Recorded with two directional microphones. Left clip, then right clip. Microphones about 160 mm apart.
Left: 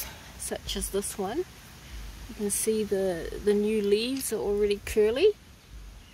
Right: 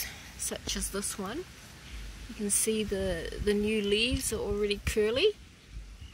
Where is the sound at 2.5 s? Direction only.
25° left (ahead or behind).